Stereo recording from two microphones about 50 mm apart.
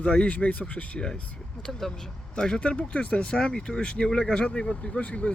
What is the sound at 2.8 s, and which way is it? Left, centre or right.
Speech, left.